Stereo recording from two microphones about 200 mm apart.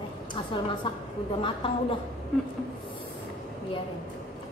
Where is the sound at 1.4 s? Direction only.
25° left (ahead or behind).